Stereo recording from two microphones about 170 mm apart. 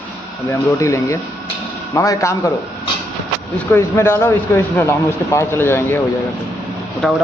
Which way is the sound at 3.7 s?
15° left (ahead or behind).